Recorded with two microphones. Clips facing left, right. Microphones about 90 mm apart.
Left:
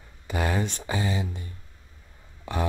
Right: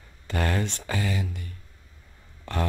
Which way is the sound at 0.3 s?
15° left (ahead or behind).